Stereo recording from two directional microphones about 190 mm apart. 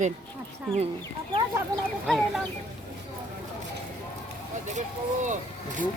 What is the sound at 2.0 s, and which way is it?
Speech, centre (ahead or behind).